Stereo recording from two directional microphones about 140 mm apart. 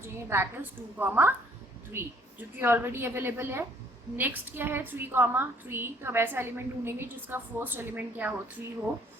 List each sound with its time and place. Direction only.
0.0 s a woman's voice: 15° right (ahead or behind)